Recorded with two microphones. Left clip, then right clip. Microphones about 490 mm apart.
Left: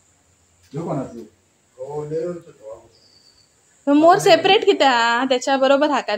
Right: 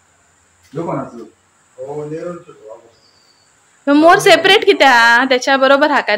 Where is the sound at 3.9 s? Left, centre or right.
Left.